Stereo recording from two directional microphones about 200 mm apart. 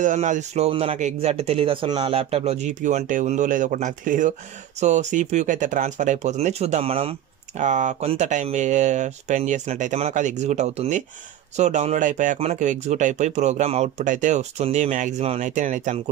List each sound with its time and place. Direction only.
0.0 s speech: 40° right (ahead or behind)